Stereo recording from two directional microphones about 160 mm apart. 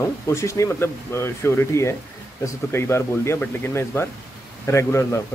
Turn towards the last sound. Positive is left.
turn(degrees=15)  # may be behind; listen again after turning